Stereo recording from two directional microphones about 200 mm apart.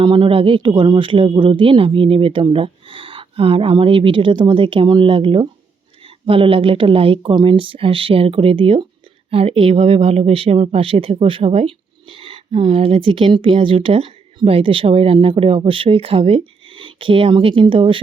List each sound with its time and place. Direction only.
0.0 s speech: 25° right (ahead or behind)